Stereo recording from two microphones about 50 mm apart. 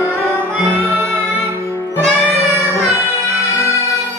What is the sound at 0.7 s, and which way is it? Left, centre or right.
Music, right.